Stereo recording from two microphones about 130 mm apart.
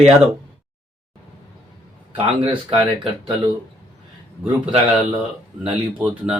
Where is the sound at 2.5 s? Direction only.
45° right (ahead or behind).